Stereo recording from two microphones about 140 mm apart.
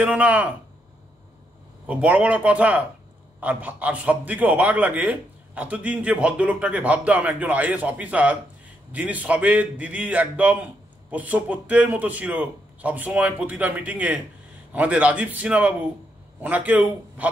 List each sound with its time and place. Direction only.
0.0 s a man's voice: 10° right (ahead or behind)
1.9 s a man's voice: 10° right (ahead or behind)